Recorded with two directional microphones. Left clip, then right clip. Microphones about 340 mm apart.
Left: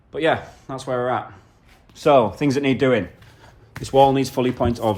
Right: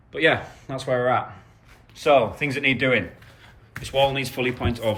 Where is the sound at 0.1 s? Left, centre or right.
Centre.